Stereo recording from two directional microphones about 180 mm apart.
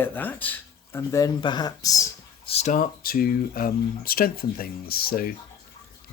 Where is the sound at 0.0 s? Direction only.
10° left (ahead or behind).